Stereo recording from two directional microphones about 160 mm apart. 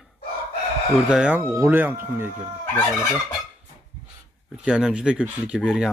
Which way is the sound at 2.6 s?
10° left (ahead or behind).